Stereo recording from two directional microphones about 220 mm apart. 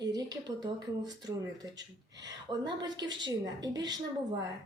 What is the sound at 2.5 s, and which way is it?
A woman's voice, 20° right (ahead or behind).